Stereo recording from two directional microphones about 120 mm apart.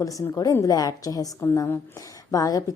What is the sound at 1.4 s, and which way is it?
Speech, 20° left (ahead or behind).